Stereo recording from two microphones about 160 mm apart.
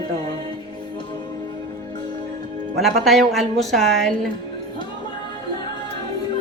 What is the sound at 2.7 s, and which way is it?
A woman's voice, centre (ahead or behind).